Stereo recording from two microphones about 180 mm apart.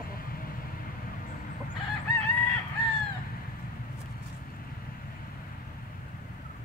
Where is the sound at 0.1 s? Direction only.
55° left (ahead or behind).